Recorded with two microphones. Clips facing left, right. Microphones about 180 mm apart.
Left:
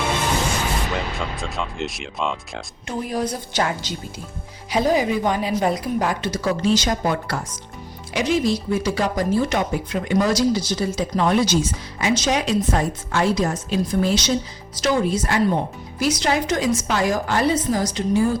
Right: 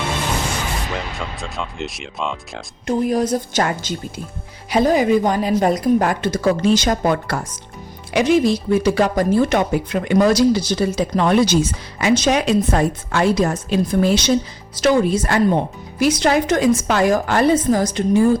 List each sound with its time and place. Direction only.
0.9 s speech: centre (ahead or behind)
2.8 s a woman's voice: 45° right (ahead or behind)